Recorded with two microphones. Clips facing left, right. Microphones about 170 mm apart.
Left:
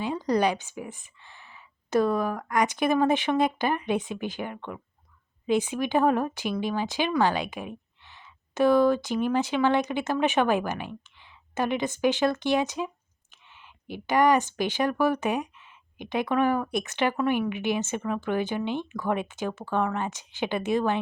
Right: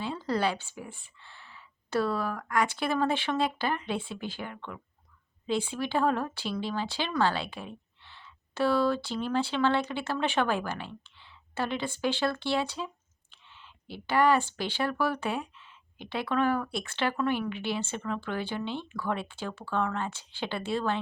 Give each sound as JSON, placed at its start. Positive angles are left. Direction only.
{"t": 0.0, "sound": "a woman's voice", "side_deg": 15}